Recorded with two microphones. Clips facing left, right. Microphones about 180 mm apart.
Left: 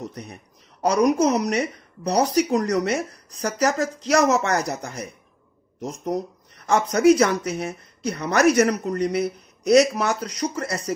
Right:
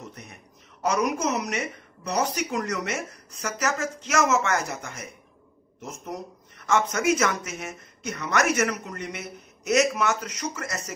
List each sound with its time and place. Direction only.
0.0 s speech: 35° left (ahead or behind)